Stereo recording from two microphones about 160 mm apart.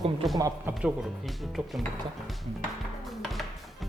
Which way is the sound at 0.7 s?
Centre (ahead or behind).